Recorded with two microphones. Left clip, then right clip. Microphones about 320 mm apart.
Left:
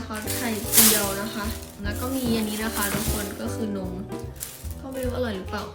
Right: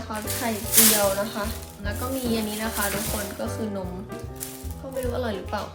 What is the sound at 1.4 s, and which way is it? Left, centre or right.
Speech, centre.